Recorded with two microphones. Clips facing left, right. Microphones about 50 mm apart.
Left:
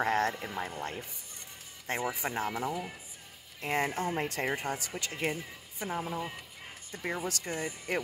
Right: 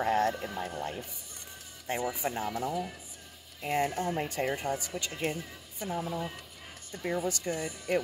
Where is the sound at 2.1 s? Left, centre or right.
Left.